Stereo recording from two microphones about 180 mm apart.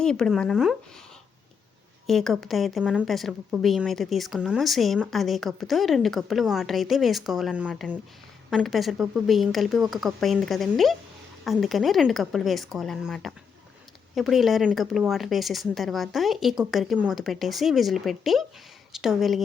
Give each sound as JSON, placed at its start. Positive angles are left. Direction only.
{"t": 0.0, "sound": "speech", "side_deg": 5}
{"t": 2.0, "sound": "speech", "side_deg": 0}